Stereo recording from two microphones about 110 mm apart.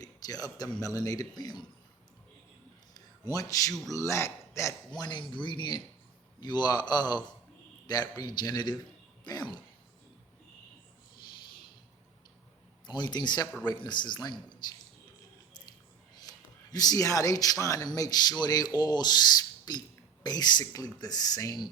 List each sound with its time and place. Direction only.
0.0 s speech: 35° left (ahead or behind)
2.9 s a sound: 35° left (ahead or behind)
3.9 s a man's voice: 25° left (ahead or behind)
4.9 s speech: 40° left (ahead or behind)
12.9 s speech: 40° left (ahead or behind)
16.3 s a sound: 35° left (ahead or behind)
16.7 s speech: 35° left (ahead or behind)